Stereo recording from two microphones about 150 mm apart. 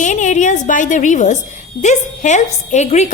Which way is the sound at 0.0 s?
55° left (ahead or behind).